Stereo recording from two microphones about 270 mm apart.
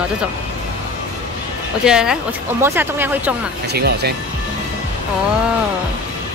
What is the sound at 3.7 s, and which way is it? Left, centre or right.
Speech, right.